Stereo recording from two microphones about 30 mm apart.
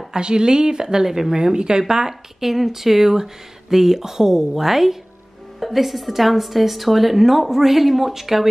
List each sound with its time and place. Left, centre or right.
0.1 s a woman's voice: right; by 8.5 s centre